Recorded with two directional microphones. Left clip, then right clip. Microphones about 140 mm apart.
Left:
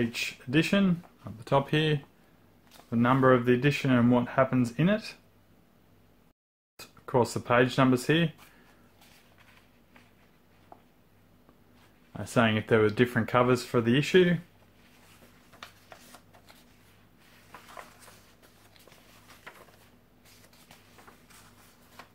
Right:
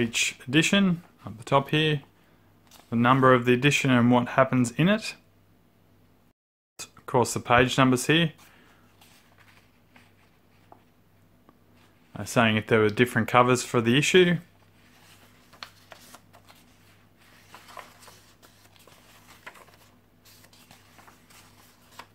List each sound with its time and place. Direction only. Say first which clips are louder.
0.0 s speech: right 5 dB; 30° right (ahead or behind)
2.9 s speech: right 3 dB; 30° right (ahead or behind)
6.8 s speech: right 2 dB; 30° right (ahead or behind)
12.1 s speech: right 3 dB; 25° right (ahead or behind)
15.6 s shuffling cards: right 4 dB; 30° right (ahead or behind)
17.5 s a sound: right 2 dB; 20° right (ahead or behind)
19.5 s a sound: right 3 dB; 25° right (ahead or behind)